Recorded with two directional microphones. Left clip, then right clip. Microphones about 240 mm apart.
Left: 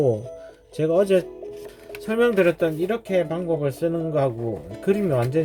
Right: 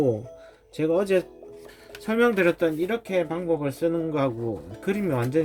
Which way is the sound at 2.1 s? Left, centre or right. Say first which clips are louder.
Left 2 dB; right.